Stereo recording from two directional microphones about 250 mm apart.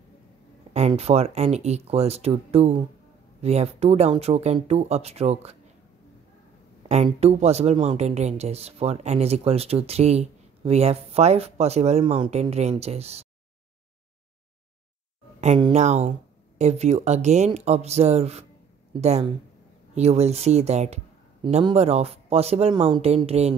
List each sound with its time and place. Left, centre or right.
0.7 s speech: right
6.9 s speech: right
15.4 s speech: right